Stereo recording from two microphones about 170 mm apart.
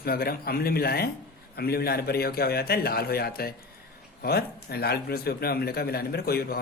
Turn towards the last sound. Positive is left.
turn(degrees=65)  # may be behind; listen again after turning